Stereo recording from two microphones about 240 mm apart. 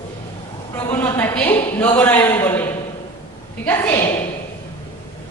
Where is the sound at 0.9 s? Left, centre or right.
Centre.